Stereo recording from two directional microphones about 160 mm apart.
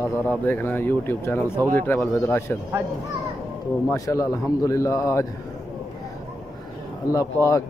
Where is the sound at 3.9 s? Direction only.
20° left (ahead or behind).